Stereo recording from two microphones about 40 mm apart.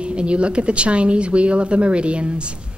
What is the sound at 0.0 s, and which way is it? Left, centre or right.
A woman's voice, right.